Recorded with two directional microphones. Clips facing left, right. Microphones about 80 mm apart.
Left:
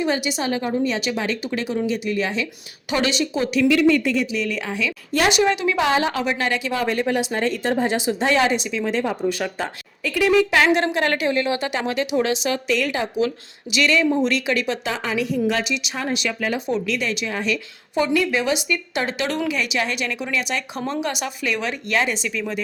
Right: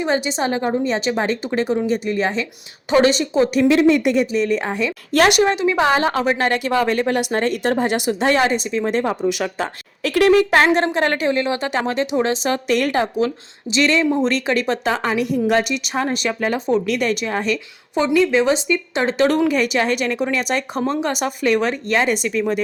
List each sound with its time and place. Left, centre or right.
0.0 s a woman's voice: right
4.0 s a woman's voice: right
4.4 s a woman's voice: right
5.1 s a woman's voice: right
5.4 s a woman's voice: right
8.3 s a woman's voice: right
9.6 s speech: right
10.5 s a woman's voice: right
16.8 s a woman's voice: right
17.9 s a woman's voice: right